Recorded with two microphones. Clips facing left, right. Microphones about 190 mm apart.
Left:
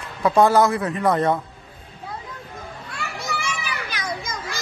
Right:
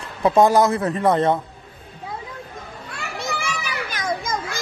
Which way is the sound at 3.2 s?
40° right (ahead or behind).